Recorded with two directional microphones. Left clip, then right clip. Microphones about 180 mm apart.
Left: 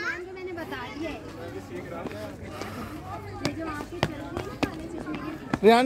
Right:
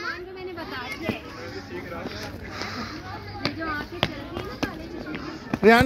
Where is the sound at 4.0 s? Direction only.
20° left (ahead or behind).